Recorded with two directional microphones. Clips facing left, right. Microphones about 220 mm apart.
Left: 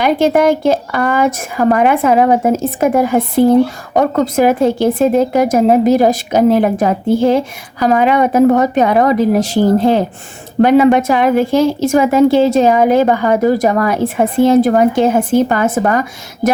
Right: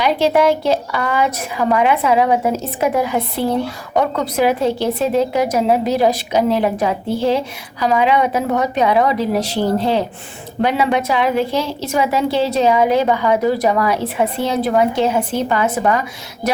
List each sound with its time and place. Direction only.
0.0 s a woman's voice: 50° left (ahead or behind)